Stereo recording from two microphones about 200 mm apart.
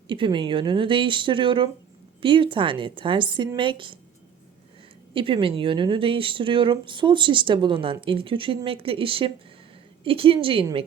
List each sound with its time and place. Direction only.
0.1 s speech: 25° right (ahead or behind)
5.1 s speech: 25° right (ahead or behind)